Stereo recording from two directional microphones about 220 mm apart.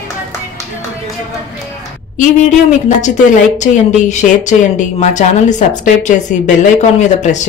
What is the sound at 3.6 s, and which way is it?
A woman's voice, 35° left (ahead or behind).